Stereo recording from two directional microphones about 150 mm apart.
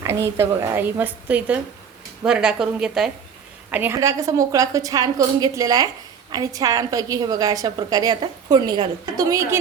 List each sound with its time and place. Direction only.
0.0 s a woman's voice: 15° right (ahead or behind)